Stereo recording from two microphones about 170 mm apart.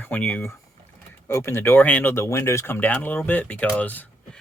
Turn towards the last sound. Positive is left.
turn(degrees=10)  # may be behind; listen again after turning